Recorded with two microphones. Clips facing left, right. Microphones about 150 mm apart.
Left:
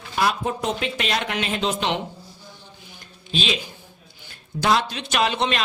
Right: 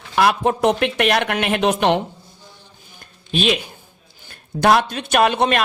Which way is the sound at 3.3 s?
60° right (ahead or behind).